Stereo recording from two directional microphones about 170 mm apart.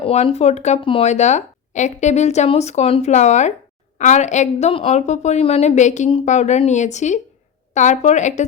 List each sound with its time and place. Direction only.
0.0 s a woman's voice: 35° left (ahead or behind)